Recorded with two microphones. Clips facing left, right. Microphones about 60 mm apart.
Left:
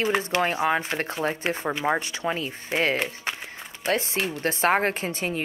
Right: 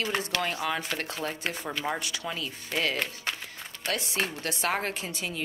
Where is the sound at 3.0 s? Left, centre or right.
Left.